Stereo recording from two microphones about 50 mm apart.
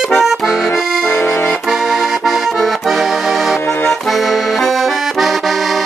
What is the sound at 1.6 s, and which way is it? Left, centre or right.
Accordion, centre.